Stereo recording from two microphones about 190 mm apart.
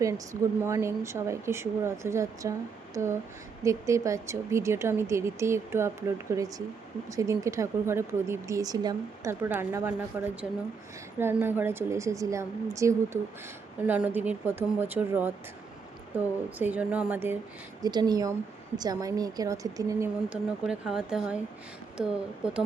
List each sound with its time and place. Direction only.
0.6 s speech: 15° right (ahead or behind)
17.8 s speech: 20° right (ahead or behind)
20.3 s speech: 5° right (ahead or behind)